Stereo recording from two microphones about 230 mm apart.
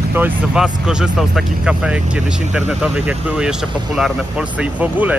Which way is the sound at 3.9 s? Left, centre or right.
Centre.